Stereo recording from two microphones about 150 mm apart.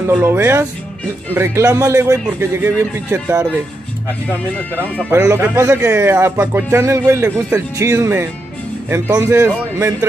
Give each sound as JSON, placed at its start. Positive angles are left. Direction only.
{"t": 0.1, "sound": "speech", "side_deg": -15}
{"t": 5.1, "sound": "speech", "side_deg": -15}